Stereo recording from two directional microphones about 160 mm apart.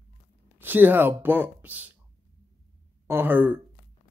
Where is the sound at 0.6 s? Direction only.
10° right (ahead or behind).